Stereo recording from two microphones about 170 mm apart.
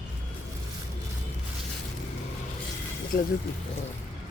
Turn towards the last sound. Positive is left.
turn(degrees=60)  # may be behind; listen again after turning